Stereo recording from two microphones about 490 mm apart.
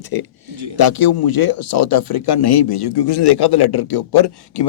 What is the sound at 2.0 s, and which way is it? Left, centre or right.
A man's voice, left.